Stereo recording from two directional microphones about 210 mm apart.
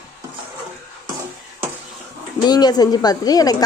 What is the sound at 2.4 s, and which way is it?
Speech, 20° left (ahead or behind).